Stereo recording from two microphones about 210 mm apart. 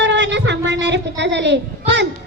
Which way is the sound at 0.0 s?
55° right (ahead or behind).